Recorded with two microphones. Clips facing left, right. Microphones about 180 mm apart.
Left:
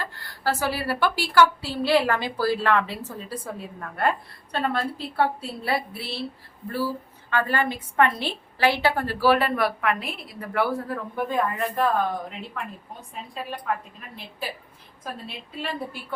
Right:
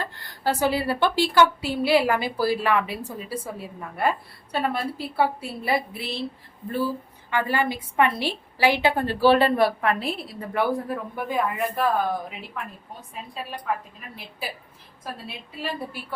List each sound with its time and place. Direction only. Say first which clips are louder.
0.0 s a woman's voice: right 1 dB; 20° right (ahead or behind)